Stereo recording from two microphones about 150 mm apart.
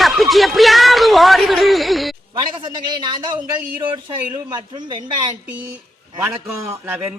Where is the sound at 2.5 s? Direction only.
30° right (ahead or behind).